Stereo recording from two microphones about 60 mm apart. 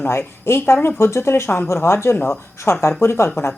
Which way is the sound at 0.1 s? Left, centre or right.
Left.